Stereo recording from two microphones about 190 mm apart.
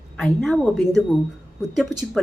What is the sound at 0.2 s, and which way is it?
Speech, centre (ahead or behind).